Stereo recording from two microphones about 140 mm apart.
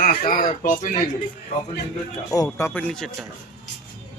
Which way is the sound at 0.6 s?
65° left (ahead or behind).